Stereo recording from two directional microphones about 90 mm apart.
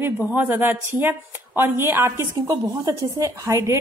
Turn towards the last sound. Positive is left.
turn(degrees=-35)  # may be behind; listen again after turning